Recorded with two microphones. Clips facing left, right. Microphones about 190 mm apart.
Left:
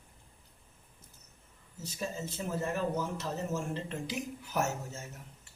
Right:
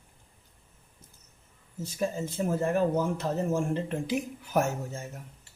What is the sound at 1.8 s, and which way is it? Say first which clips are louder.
A man's voice: right 7 dB; 50° right (ahead or behind).